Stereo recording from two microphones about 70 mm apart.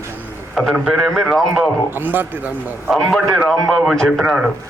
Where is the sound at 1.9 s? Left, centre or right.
Right.